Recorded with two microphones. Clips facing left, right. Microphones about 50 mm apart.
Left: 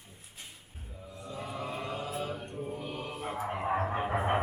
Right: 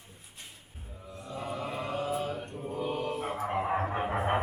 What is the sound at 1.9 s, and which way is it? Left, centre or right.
Mantra, right.